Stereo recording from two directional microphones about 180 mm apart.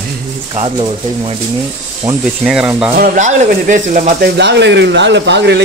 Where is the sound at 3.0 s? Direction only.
45° right (ahead or behind).